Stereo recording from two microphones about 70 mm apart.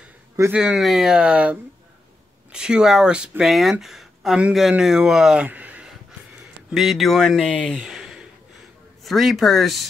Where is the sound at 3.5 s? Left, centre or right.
Centre.